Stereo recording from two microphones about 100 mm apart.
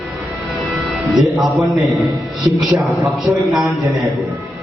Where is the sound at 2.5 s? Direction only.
35° right (ahead or behind).